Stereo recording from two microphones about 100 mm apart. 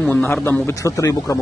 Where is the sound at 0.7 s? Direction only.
35° left (ahead or behind).